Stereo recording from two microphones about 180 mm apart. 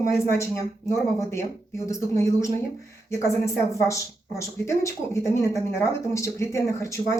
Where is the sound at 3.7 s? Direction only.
15° left (ahead or behind).